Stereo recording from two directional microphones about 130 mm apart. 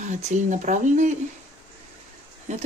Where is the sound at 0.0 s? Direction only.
65° right (ahead or behind).